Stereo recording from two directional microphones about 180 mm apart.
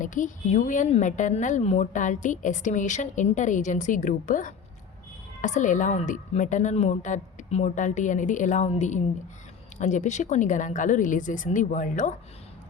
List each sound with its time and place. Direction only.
0.0 s a woman's voice: 45° left (ahead or behind)